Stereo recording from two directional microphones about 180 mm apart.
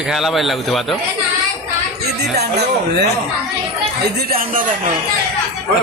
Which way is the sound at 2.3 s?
65° right (ahead or behind).